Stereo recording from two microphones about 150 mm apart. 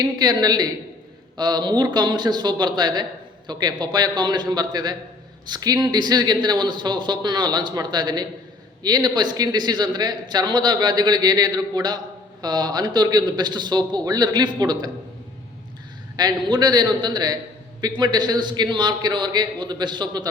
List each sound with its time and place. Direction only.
0.0 s speech: 25° right (ahead or behind)
16.1 s speech: 30° right (ahead or behind)